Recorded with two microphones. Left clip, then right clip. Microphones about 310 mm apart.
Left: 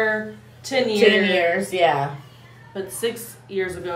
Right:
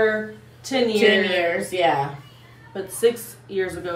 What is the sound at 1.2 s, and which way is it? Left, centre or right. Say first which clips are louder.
Speech: left 2 dB; centre.